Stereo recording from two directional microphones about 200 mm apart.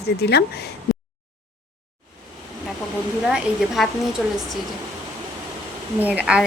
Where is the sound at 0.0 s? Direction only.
55° left (ahead or behind).